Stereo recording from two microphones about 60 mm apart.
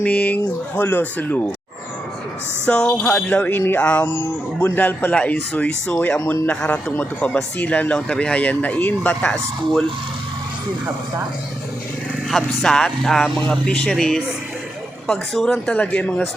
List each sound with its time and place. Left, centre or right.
0.0 s speech: left
0.8 s speech: left
2.6 s speech: centre
3.2 s speech: left
6.5 s speech: centre
6.9 s speech: left
12.3 s speech: centre
15.8 s speech: left